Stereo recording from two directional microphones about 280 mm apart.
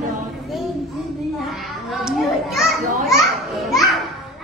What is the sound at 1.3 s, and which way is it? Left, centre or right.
Children playing, centre.